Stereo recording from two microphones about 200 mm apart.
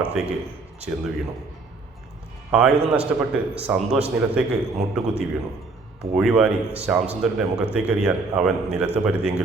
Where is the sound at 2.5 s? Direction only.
5° right (ahead or behind).